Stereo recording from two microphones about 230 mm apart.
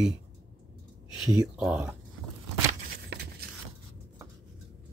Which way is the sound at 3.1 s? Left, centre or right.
Right.